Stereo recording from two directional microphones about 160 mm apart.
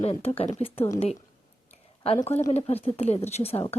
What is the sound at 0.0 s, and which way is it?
Speech, 40° left (ahead or behind).